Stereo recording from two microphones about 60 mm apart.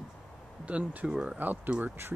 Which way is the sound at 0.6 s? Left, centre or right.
Right.